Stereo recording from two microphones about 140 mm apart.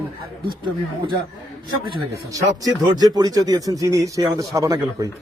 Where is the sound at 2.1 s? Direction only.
25° right (ahead or behind).